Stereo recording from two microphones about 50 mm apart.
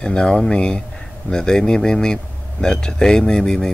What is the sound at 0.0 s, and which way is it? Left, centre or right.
Speech, centre.